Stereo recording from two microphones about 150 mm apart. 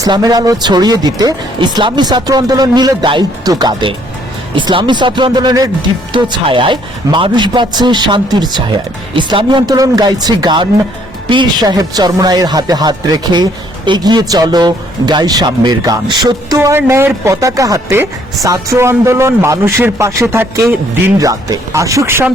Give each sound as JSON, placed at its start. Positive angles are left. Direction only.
{"t": 0.0, "sound": "a man's voice", "side_deg": -25}
{"t": 16.6, "sound": "speech", "side_deg": -15}